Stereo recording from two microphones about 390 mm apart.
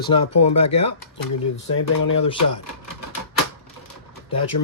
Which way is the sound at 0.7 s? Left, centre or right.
Left.